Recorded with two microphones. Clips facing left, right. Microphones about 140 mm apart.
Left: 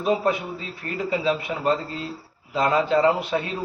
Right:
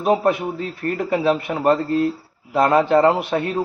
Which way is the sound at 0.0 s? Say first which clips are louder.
Right 4 dB; 55° right (ahead or behind).